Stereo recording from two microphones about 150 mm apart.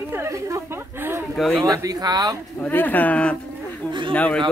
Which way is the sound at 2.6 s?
10° left (ahead or behind).